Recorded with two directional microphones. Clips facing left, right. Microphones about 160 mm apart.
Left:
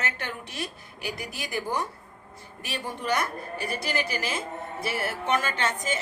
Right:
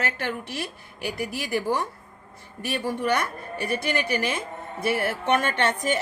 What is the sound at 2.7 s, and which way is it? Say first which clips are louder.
Speech: right 5 dB; 55° right (ahead or behind).